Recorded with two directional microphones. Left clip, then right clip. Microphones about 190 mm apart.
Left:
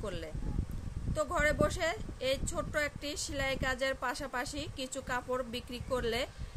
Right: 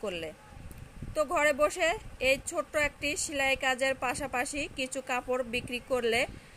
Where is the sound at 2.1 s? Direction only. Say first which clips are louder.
Right 6 dB; 30° left (ahead or behind).